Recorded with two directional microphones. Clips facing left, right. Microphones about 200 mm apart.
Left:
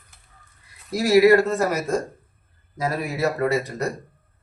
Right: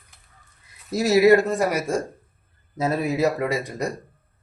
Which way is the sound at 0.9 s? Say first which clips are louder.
Left 1 dB; 25° right (ahead or behind).